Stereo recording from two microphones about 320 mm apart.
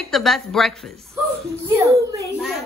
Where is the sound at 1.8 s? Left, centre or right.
Centre.